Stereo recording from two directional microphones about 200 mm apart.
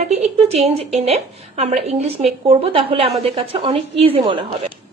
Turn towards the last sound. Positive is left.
turn(degrees=-25)  # may be behind; listen again after turning